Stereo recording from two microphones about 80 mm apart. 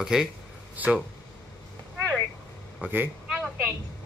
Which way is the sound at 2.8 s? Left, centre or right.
Right.